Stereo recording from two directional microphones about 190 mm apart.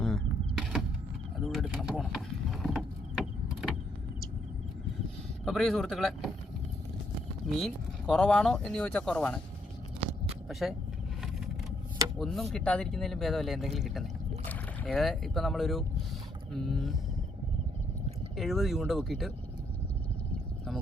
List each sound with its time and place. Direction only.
0.0 s a sound: centre (ahead or behind)
1.5 s mechanisms: centre (ahead or behind)
5.5 s speech: centre (ahead or behind)
7.6 s speech: 5° left (ahead or behind)
10.0 s a sound: 30° right (ahead or behind)
10.5 s speech: centre (ahead or behind)
12.2 s speech: centre (ahead or behind)
18.3 s speech: centre (ahead or behind)